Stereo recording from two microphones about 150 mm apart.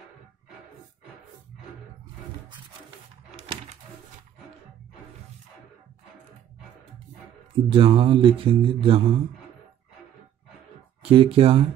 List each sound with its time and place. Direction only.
7.5 s speech: 35° right (ahead or behind)
11.0 s speech: 35° right (ahead or behind)